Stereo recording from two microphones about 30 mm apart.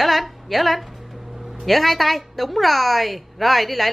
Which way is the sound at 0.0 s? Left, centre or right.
Centre.